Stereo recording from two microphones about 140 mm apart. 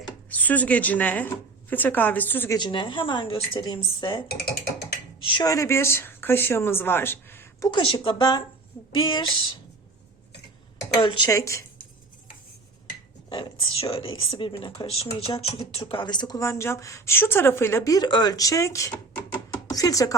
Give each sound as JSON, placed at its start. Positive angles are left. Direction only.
{"t": 0.3, "sound": "speech", "side_deg": 10}
{"t": 2.6, "sound": "a woman's voice", "side_deg": 35}
{"t": 5.2, "sound": "a woman's voice", "side_deg": 35}
{"t": 5.5, "sound": "speech", "side_deg": 20}
{"t": 7.7, "sound": "a woman's voice", "side_deg": 35}
{"t": 10.9, "sound": "a woman's voice", "side_deg": 35}
{"t": 11.3, "sound": "speech", "side_deg": 20}
{"t": 13.3, "sound": "speech", "side_deg": 35}